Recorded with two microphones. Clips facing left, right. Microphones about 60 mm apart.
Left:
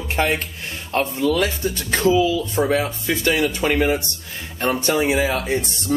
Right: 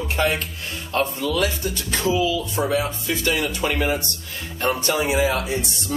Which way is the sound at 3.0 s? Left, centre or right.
Left.